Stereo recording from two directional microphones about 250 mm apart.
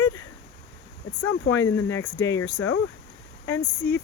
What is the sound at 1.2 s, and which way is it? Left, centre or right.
Speech, left.